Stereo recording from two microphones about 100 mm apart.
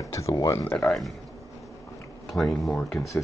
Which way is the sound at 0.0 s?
30° left (ahead or behind).